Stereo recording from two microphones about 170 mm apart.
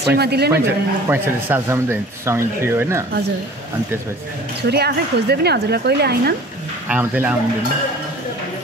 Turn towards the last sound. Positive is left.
turn(degrees=-10)  # may be behind; listen again after turning